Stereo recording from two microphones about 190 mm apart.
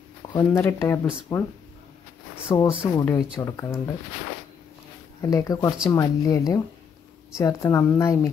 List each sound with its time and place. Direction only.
0.3 s a woman's voice: 15° left (ahead or behind)
2.4 s speech: 25° left (ahead or behind)
2.8 s a woman's voice: 10° left (ahead or behind)
5.2 s a woman's voice: 20° left (ahead or behind)